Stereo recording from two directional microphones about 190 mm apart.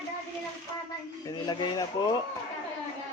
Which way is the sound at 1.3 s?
20° left (ahead or behind).